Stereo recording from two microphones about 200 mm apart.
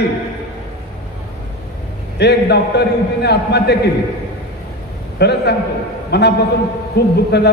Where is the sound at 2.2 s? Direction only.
55° left (ahead or behind).